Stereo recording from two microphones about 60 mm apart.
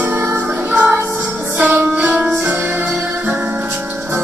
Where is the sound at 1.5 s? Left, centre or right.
Right.